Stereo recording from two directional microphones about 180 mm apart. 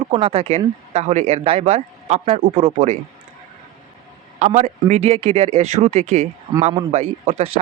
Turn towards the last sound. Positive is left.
turn(degrees=-35)  # may be behind; listen again after turning